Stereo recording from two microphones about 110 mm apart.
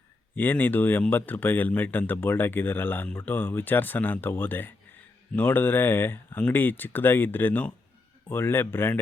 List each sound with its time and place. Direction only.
0.3 s speech: 15° left (ahead or behind)